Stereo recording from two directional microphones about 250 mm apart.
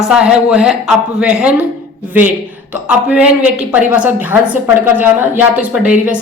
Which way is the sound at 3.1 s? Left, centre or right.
Centre.